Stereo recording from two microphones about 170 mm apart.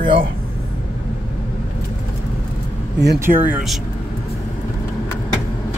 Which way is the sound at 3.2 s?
10° right (ahead or behind).